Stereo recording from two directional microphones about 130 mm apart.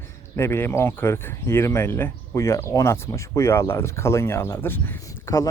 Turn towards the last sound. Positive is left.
turn(degrees=20)  # may be behind; listen again after turning